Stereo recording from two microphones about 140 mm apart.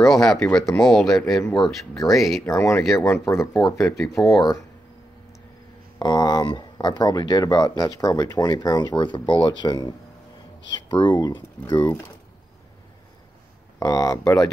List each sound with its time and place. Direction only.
0.0 s speech: centre (ahead or behind)
2.4 s speech: 20° left (ahead or behind)
5.9 s speech: 30° left (ahead or behind)
13.7 s speech: 25° left (ahead or behind)